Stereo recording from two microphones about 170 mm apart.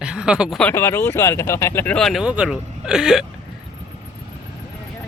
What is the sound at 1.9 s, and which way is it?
Speech, centre (ahead or behind).